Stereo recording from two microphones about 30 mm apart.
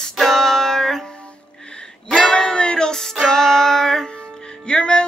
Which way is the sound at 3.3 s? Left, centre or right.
Centre.